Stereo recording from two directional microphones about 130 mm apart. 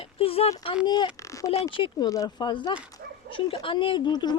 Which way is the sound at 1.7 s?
40° left (ahead or behind).